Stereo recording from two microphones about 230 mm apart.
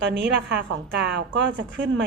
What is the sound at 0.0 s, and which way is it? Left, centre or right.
A woman's voice, right.